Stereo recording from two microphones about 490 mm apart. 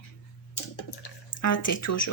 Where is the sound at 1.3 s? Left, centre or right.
Left.